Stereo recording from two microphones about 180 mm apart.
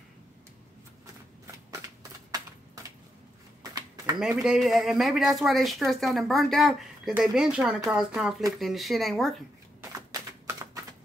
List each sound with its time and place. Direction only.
3.7 s a sound: 20° right (ahead or behind)
4.2 s speech: centre (ahead or behind)
9.8 s typewriter: 15° right (ahead or behind)